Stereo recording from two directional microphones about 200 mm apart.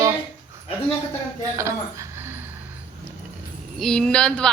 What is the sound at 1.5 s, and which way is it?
Speech, 15° right (ahead or behind).